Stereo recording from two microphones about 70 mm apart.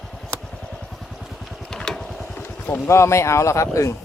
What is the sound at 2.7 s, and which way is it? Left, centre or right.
Speech, left.